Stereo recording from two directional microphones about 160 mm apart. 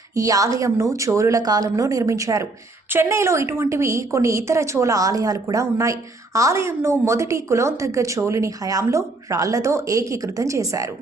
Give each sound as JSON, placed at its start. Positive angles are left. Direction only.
{"t": 0.1, "sound": "a woman's voice", "side_deg": -20}